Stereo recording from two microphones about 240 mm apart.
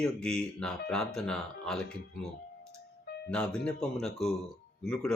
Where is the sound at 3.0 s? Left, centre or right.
Left.